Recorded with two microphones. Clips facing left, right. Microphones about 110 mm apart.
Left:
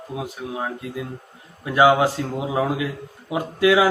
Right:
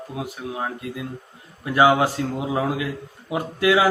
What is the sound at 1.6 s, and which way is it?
A man's voice, 20° left (ahead or behind).